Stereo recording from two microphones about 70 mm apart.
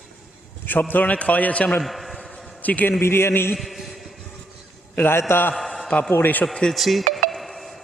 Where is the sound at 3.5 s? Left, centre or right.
Centre.